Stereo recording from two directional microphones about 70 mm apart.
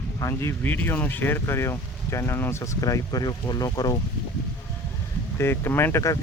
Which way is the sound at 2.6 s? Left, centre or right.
Left.